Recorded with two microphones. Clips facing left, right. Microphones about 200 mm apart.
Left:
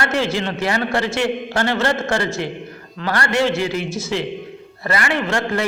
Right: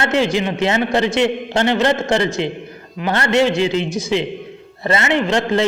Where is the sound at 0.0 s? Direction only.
20° right (ahead or behind).